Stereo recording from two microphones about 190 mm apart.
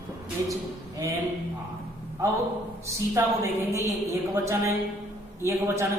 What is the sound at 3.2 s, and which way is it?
Speech, 15° right (ahead or behind).